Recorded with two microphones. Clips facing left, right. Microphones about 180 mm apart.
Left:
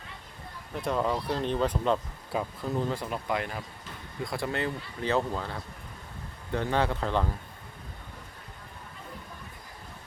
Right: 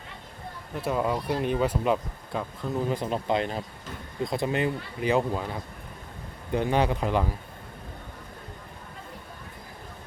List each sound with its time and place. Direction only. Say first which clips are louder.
0.7 s speech: right 1 dB; 5° right (ahead or behind)
2.3 s speech: even; 5° left (ahead or behind)
2.9 s speech: right 5 dB; 20° right (ahead or behind)